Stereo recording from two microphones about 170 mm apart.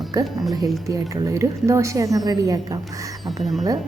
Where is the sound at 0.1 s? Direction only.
20° right (ahead or behind).